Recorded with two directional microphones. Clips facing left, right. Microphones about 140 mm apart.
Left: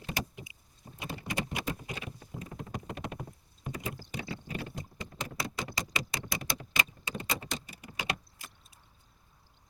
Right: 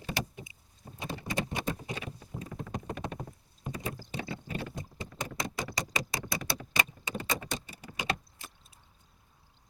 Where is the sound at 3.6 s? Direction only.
25° right (ahead or behind).